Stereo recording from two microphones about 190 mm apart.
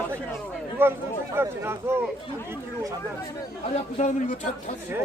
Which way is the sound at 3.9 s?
40° left (ahead or behind).